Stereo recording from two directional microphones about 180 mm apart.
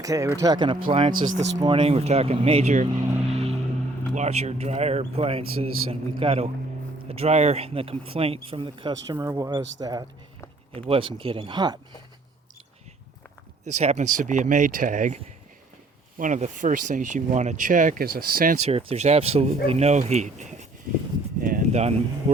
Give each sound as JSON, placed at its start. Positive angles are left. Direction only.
{"t": 0.0, "sound": "speech", "side_deg": -20}
{"t": 3.3, "sound": "vehicle", "side_deg": -35}
{"t": 4.1, "sound": "speech", "side_deg": -40}
{"t": 13.7, "sound": "speech", "side_deg": -40}
{"t": 18.6, "sound": "speech", "side_deg": -35}
{"t": 21.4, "sound": "a sound", "side_deg": -45}